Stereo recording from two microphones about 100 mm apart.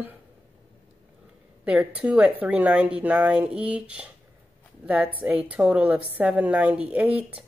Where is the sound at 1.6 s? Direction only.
10° right (ahead or behind).